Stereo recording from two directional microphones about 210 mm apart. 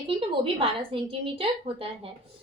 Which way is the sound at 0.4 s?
25° right (ahead or behind).